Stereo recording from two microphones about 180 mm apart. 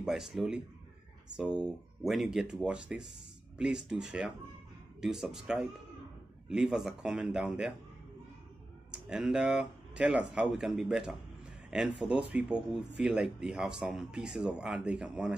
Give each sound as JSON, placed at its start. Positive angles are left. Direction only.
{"t": 0.0, "sound": "speech", "side_deg": 0}
{"t": 8.9, "sound": "speech", "side_deg": -5}